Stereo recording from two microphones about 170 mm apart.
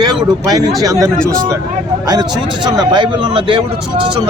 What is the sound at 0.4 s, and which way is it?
A man's voice, 25° right (ahead or behind).